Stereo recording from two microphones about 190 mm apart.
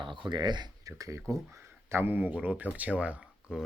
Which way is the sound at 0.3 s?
25° right (ahead or behind).